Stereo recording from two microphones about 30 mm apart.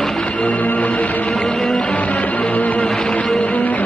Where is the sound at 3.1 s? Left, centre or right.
Left.